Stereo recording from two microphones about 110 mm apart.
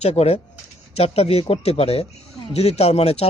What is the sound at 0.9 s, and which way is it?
A man's voice, 70° left (ahead or behind).